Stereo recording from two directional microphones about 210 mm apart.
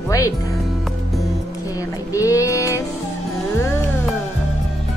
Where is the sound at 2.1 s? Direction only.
15° left (ahead or behind).